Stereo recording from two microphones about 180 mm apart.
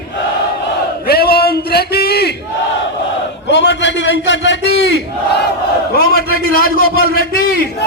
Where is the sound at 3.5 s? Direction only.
75° left (ahead or behind).